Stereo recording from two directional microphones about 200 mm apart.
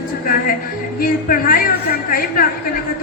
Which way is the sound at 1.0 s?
45° left (ahead or behind).